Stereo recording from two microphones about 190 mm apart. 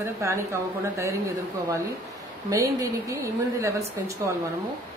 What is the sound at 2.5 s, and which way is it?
A woman's voice, 15° right (ahead or behind).